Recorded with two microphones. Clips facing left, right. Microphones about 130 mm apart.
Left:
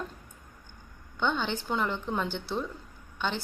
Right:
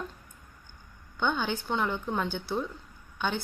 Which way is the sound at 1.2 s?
5° right (ahead or behind).